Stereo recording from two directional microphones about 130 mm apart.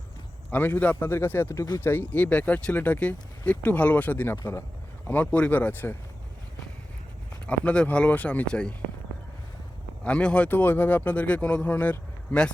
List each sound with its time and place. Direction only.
0.5 s speech: 15° left (ahead or behind)
7.4 s speech: 10° left (ahead or behind)
10.0 s speech: 10° left (ahead or behind)